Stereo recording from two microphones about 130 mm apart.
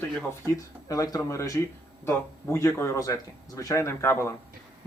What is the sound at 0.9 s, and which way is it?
Speech, 25° left (ahead or behind).